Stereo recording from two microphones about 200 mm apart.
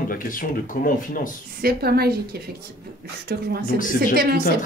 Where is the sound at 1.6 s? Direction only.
50° right (ahead or behind).